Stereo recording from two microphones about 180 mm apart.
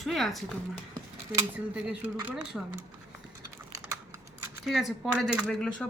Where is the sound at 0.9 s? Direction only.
15° right (ahead or behind).